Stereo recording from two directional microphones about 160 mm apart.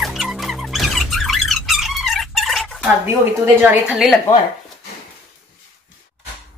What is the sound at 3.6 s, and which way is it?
Speech, 5° right (ahead or behind).